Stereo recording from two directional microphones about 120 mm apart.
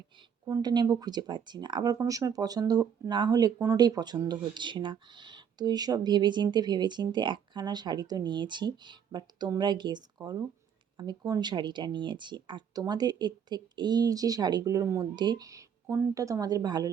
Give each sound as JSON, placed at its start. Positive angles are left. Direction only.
{"t": 0.4, "sound": "speech", "side_deg": -35}